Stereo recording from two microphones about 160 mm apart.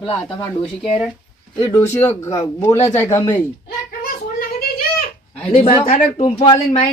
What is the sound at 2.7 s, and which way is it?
Speech, 45° left (ahead or behind).